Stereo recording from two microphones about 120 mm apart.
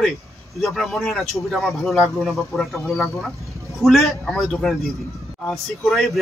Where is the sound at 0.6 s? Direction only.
Centre (ahead or behind).